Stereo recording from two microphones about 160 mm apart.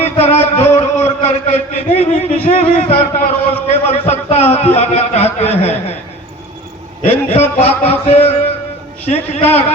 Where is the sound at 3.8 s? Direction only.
40° left (ahead or behind).